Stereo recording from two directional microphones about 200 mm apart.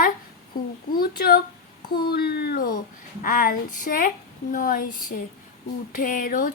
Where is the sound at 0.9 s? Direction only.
45° left (ahead or behind).